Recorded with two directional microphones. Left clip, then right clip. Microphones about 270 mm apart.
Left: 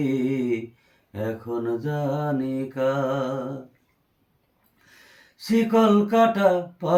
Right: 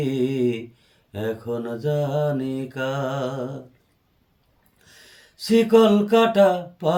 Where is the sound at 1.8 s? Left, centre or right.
Right.